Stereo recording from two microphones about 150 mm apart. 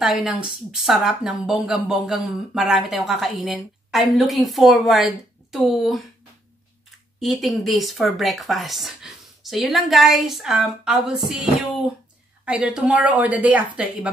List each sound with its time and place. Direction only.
0.0 s speech: 5° right (ahead or behind)
7.2 s a woman's voice: centre (ahead or behind)